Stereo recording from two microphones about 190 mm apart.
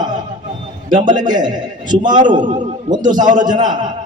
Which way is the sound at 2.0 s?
40° right (ahead or behind).